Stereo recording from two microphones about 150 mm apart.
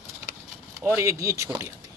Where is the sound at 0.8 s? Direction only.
15° right (ahead or behind).